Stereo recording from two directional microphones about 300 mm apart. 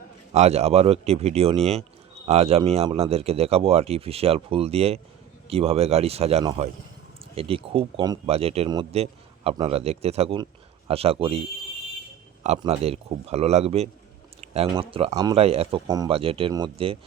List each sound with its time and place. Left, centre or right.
0.3 s speech: right